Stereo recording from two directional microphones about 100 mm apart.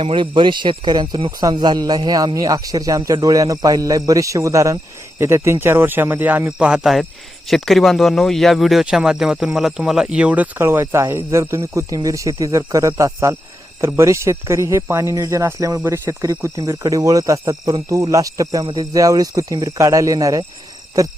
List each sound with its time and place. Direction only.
0.0 s speech: 55° right (ahead or behind); by 20.4 s 35° right (ahead or behind)